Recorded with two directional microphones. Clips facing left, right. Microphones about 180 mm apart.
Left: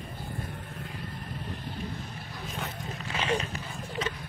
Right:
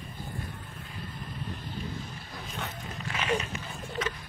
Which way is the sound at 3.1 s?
30° left (ahead or behind).